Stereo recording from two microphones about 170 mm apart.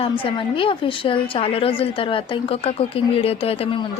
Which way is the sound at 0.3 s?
30° left (ahead or behind).